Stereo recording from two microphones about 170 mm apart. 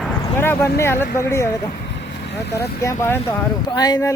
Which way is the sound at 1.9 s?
85° left.